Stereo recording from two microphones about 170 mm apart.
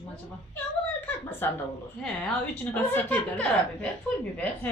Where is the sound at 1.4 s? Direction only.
10° left (ahead or behind).